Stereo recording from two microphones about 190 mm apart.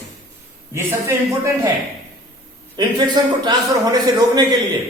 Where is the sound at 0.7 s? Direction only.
15° right (ahead or behind).